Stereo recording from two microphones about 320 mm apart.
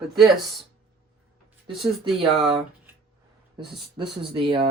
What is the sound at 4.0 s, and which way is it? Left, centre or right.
Rub, centre.